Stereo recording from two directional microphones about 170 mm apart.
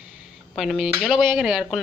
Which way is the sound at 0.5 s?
Centre (ahead or behind).